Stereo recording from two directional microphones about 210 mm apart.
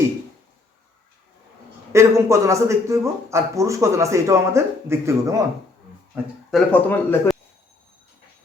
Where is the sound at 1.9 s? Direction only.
15° right (ahead or behind).